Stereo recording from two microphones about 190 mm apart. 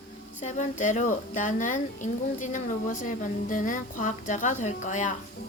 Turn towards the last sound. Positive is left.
turn(degrees=40)  # may be behind; listen again after turning